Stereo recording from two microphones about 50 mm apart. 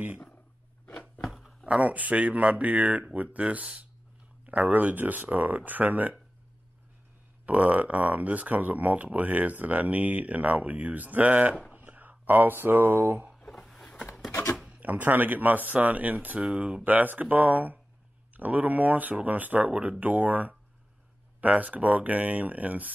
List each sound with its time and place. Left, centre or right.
1.2 s a sound: centre
1.7 s speech: right
7.4 s speech: right
13.5 s a sound: centre
14.7 s speech: right
16.8 s speech: right